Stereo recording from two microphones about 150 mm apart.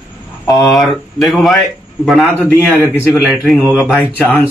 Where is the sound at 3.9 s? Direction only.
10° left (ahead or behind).